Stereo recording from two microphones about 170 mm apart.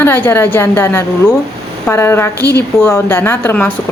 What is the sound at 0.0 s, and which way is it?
Speech, 15° left (ahead or behind).